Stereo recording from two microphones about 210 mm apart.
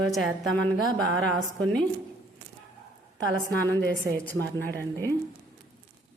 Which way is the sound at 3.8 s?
50° right (ahead or behind).